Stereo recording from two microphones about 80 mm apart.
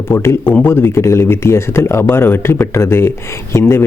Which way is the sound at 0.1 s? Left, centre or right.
Left.